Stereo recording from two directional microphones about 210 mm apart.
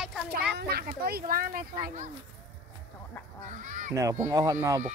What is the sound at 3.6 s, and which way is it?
Speech, 35° right (ahead or behind).